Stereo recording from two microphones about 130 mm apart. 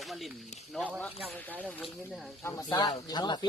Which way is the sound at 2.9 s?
35° left (ahead or behind).